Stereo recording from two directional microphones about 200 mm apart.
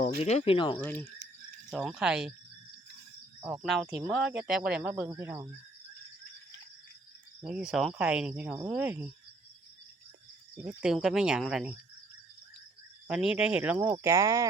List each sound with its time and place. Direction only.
0.0 s speech: 35° left (ahead or behind)
0.8 s speech: 10° left (ahead or behind)
3.4 s speech: 5° right (ahead or behind)
7.4 s speech: centre (ahead or behind)
10.6 s speech: 5° right (ahead or behind)
13.1 s speech: 5° right (ahead or behind)